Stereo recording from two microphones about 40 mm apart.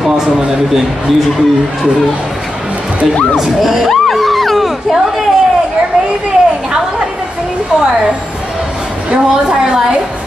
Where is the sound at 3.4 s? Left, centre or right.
Centre.